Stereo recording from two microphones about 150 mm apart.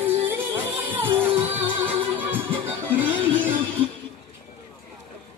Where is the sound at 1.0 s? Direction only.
35° right (ahead or behind).